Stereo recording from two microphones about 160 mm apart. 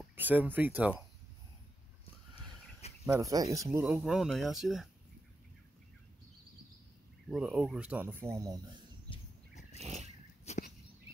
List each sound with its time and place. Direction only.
0.1 s speech: 10° right (ahead or behind)
2.8 s cricket: 40° left (ahead or behind)
3.2 s speech: 20° right (ahead or behind)
3.8 s speech: centre (ahead or behind)
7.2 s speech: 5° right (ahead or behind)
9.8 s a sound: 45° right (ahead or behind)
10.5 s a sound: 45° left (ahead or behind)